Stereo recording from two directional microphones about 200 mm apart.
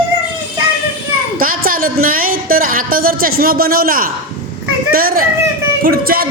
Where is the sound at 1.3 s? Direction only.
45° right (ahead or behind).